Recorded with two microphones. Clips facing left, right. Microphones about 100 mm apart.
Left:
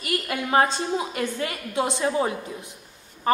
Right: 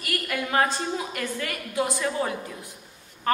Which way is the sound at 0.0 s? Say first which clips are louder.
Left 2 dB; 25° left (ahead or behind).